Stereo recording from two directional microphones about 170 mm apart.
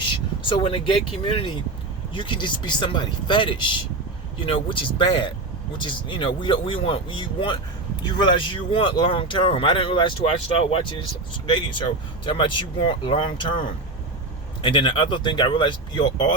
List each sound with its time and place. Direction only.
0.0 s vehicle: 30° left (ahead or behind)
1.2 s speech: 30° left (ahead or behind)
14.6 s speech: 30° left (ahead or behind)